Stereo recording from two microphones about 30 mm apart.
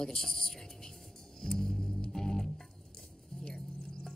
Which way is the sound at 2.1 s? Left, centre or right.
Centre.